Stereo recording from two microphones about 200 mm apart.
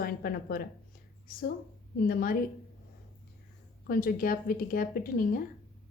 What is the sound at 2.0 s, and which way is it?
Speech, 45° left (ahead or behind).